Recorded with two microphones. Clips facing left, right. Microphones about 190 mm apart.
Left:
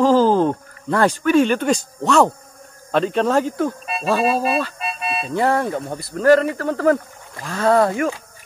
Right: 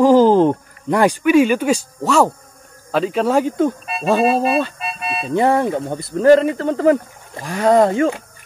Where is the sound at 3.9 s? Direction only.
Centre (ahead or behind).